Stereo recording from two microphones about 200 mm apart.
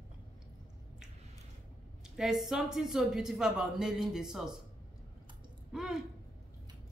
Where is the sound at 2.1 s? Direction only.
Centre (ahead or behind).